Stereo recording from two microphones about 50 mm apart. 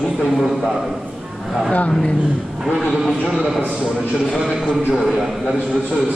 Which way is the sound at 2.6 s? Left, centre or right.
Centre.